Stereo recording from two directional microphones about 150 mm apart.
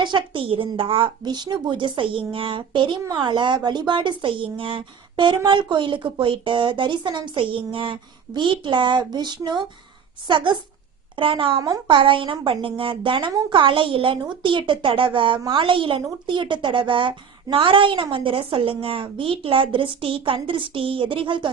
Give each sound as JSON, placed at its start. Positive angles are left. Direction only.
{"t": 0.0, "sound": "speech", "side_deg": -30}